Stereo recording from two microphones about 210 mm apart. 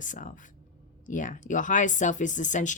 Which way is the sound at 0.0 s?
35° left (ahead or behind).